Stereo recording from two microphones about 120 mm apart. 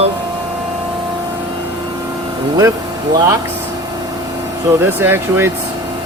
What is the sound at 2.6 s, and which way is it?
Speech, 30° right (ahead or behind).